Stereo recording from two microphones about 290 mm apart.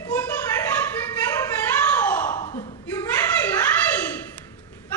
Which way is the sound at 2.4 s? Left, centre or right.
Left.